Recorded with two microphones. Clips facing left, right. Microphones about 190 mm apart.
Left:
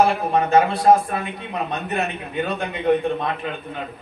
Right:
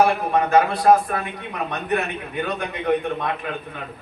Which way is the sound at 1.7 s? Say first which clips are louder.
Right 3 dB; 25° left (ahead or behind).